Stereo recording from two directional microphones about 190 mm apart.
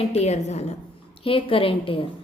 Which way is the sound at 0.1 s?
35° left (ahead or behind).